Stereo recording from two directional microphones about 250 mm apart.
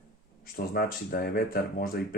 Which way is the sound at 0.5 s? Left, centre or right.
Left.